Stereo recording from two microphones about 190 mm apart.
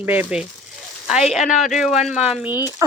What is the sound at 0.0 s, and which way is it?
Speech, 10° right (ahead or behind).